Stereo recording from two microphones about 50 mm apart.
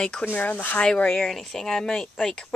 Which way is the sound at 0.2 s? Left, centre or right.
Left.